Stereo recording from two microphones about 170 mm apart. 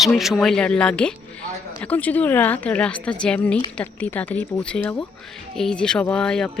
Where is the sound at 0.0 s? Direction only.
Centre (ahead or behind).